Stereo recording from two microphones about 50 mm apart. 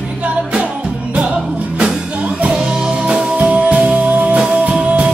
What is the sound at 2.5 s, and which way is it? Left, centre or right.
Music, centre.